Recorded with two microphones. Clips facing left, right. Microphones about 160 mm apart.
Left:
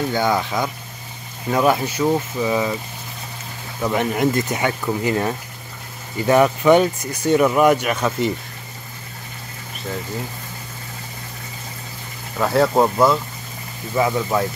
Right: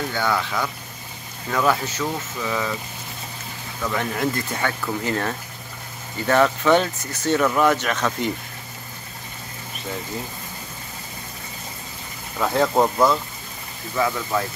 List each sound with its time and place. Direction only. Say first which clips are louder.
0.1 s speech: left 4 dB; 15° left (ahead or behind)
3.8 s speech: left 5 dB; 20° left (ahead or behind)
12.4 s speech: left 3 dB; 5° left (ahead or behind)
13.9 s speech: left 4 dB; 20° left (ahead or behind)